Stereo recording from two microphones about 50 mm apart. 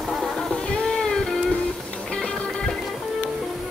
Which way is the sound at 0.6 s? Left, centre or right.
Centre.